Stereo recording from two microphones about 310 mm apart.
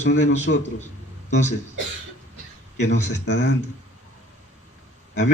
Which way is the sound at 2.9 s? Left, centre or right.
Left.